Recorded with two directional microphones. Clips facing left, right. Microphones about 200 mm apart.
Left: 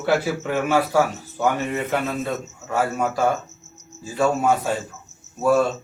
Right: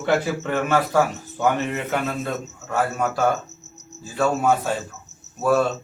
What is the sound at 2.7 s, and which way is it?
Speech, 10° left (ahead or behind).